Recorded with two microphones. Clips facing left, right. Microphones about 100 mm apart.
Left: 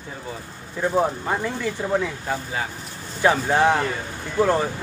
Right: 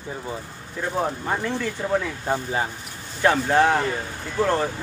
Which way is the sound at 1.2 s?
10° left (ahead or behind).